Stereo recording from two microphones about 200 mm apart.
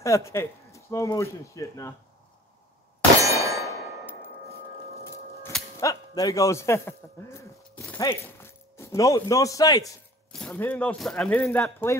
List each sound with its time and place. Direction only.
0.0 s speech: 15° left (ahead or behind)
3.2 s clang: 15° right (ahead or behind)
5.0 s speech: 10° left (ahead or behind)
10.3 s speech: 5° left (ahead or behind)